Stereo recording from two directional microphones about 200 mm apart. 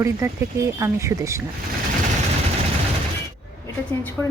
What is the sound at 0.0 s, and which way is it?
Speech, 15° right (ahead or behind).